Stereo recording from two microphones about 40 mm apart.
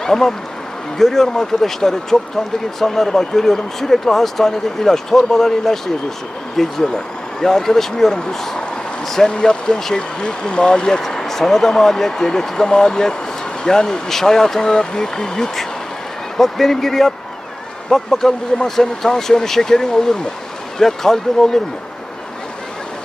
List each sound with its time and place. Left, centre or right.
0.0 s speech: centre